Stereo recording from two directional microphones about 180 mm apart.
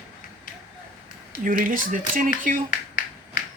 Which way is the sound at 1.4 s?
50° right (ahead or behind).